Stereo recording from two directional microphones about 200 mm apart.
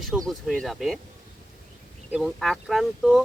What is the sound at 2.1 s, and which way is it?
Speech, 5° right (ahead or behind).